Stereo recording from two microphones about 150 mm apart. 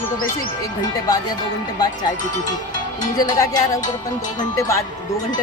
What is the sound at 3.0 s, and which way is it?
Speech, 25° left (ahead or behind).